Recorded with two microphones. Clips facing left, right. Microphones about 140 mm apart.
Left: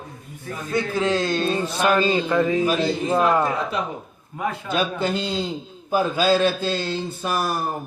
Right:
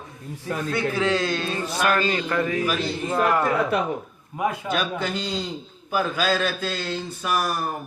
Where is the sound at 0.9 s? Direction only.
20° left (ahead or behind).